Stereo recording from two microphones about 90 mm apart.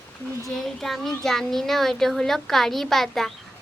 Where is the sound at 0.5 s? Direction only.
5° left (ahead or behind).